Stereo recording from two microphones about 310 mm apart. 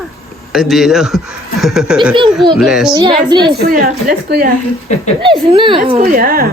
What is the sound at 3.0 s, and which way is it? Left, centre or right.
Speech, centre.